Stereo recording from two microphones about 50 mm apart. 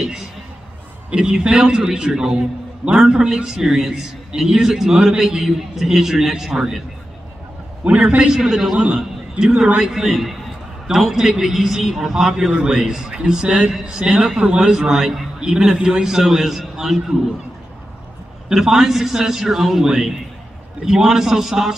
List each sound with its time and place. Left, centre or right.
1.1 s a man's voice: centre
7.8 s a man's voice: right; by 17.0 s centre
18.5 s a man's voice: centre